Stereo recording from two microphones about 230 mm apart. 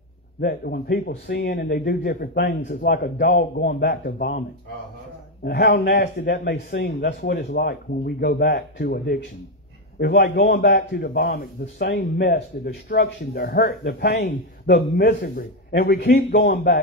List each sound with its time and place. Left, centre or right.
0.4 s a man's voice: left
5.4 s a man's voice: left